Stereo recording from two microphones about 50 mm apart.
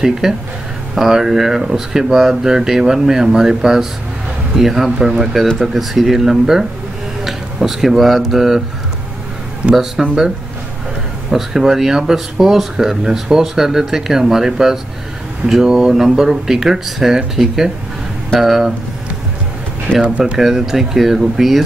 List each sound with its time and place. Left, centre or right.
0.0 s speech: centre
10.0 s speech: centre
11.2 s speech: centre
20.0 s speech: right
20.3 s speech: centre